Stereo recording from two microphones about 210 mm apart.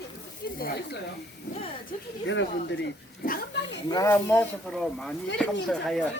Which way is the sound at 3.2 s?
45° left (ahead or behind).